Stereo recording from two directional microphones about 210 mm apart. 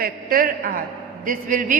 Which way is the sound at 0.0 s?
40° right (ahead or behind).